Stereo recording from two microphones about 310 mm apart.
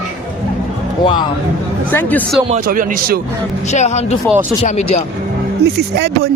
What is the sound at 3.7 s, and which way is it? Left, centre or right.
Speech, left.